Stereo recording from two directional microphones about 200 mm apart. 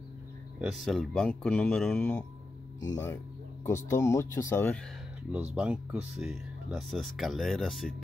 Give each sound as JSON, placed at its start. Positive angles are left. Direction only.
{"t": 0.6, "sound": "speech", "side_deg": -5}
{"t": 2.8, "sound": "speech", "side_deg": 15}
{"t": 5.3, "sound": "speech", "side_deg": -5}